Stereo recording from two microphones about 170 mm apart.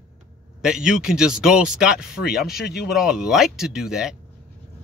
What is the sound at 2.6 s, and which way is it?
Speech, 70° left (ahead or behind).